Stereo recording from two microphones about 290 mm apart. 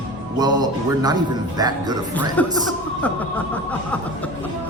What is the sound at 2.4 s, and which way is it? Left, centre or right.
Speech, centre.